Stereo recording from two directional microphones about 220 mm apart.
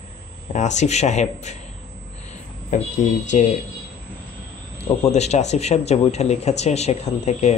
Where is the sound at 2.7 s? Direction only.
35° left (ahead or behind).